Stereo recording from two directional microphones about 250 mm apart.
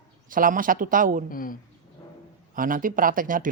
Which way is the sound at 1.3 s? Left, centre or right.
Left.